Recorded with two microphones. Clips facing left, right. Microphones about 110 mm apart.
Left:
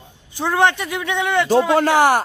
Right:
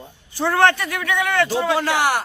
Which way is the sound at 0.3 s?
15° left (ahead or behind).